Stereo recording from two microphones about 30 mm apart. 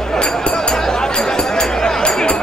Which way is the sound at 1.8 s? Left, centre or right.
Left.